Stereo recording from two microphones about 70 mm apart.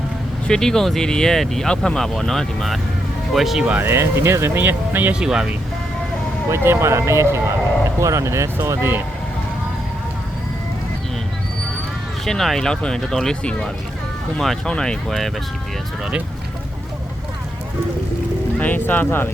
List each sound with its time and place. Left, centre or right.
0.4 s speech: centre
3.8 s speech: right
4.6 s speech: right
5.2 s speech: centre
6.5 s speech: right
12.2 s speech: centre
18.6 s speech: left